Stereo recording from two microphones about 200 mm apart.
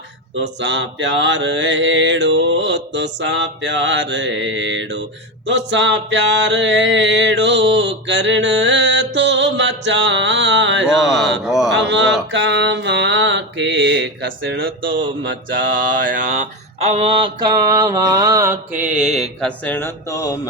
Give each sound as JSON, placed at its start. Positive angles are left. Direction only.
{"t": 0.6, "sound": "mantra", "side_deg": -65}
{"t": 5.5, "sound": "a sound", "side_deg": -65}
{"t": 11.4, "sound": "speech", "side_deg": 0}
{"t": 11.7, "sound": "speech", "side_deg": -65}
{"t": 12.3, "sound": "mantra", "side_deg": -65}
{"t": 15.9, "sound": "mantra", "side_deg": -40}
{"t": 19.4, "sound": "speech", "side_deg": 5}